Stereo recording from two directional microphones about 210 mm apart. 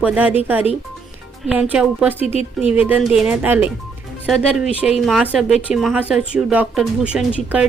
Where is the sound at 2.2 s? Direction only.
30° left (ahead or behind).